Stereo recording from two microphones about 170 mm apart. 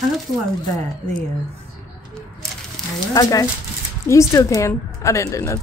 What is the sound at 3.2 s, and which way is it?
A woman's voice, 20° left (ahead or behind).